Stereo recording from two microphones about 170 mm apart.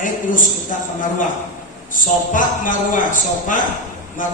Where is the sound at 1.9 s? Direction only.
50° left (ahead or behind).